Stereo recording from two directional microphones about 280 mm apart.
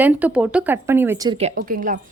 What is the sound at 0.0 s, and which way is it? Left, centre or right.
A woman's voice, centre.